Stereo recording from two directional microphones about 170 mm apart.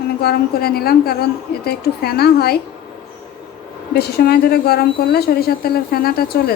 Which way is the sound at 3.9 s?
70° left (ahead or behind).